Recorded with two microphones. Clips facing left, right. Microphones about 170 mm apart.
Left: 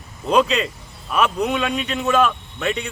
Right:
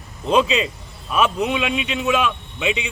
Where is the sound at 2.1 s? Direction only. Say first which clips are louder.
Left 2 dB; centre (ahead or behind).